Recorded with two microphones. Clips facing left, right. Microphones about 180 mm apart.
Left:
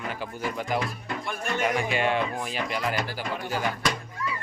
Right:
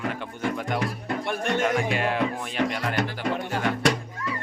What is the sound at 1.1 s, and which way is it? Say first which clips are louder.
Music: right 7 dB; 65° right (ahead or behind).